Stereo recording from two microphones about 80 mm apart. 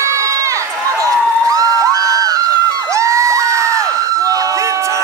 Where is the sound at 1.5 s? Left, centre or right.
Right.